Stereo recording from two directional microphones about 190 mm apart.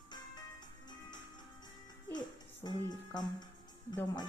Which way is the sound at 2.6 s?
20° left (ahead or behind).